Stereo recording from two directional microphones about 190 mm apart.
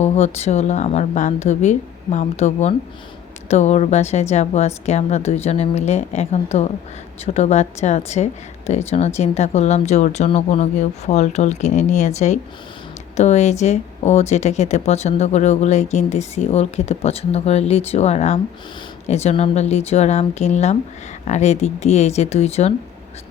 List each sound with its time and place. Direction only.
0.0 s speech: 35° left (ahead or behind)